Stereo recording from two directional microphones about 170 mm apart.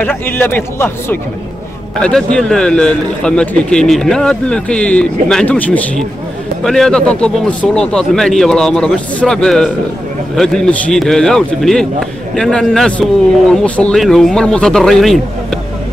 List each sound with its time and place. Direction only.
0.0 s a man's voice: 10° left (ahead or behind)